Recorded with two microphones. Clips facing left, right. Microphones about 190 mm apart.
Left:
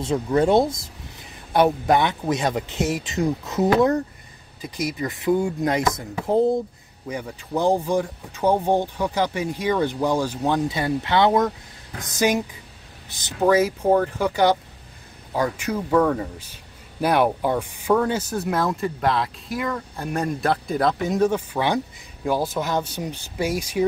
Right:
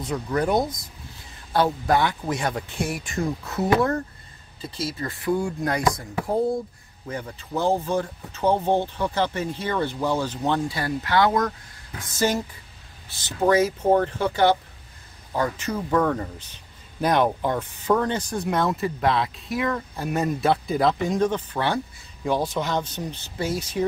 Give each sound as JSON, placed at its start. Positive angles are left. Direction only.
{"t": 0.0, "sound": "speech", "side_deg": 25}
{"t": 7.1, "sound": "speech", "side_deg": 10}